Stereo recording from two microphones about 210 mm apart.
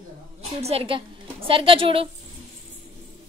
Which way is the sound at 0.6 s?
25° right (ahead or behind).